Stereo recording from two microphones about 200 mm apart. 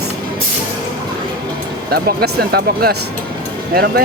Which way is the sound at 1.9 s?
50° right (ahead or behind).